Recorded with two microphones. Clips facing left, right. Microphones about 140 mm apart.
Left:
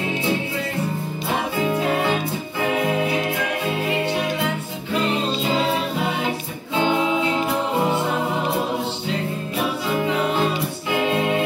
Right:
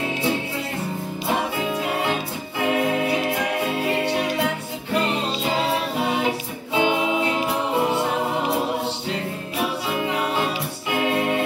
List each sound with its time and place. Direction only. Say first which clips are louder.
6.7 s music: left 1 dB; 15° right (ahead or behind)